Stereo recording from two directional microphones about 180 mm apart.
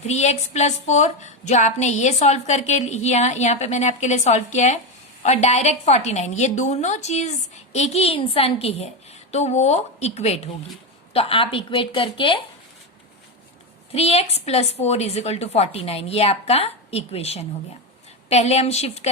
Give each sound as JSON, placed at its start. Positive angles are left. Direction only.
{"t": 0.1, "sound": "a woman's voice", "side_deg": 40}
{"t": 13.9, "sound": "a woman's voice", "side_deg": 35}